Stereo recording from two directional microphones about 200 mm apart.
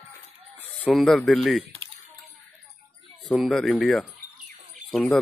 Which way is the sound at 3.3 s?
Centre (ahead or behind).